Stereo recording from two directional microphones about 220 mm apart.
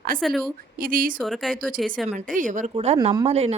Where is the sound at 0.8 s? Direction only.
40° right (ahead or behind).